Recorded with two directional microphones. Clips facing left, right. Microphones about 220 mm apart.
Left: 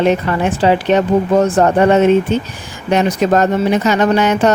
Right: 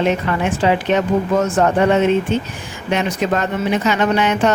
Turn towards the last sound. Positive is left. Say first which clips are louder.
# left 4 dB
turn(degrees=40)  # may be behind; listen again after turning